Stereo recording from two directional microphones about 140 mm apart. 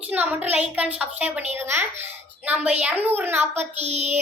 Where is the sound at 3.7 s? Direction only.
50° right (ahead or behind).